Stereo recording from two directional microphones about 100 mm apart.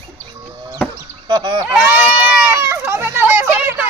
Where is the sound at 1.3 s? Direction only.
55° right (ahead or behind).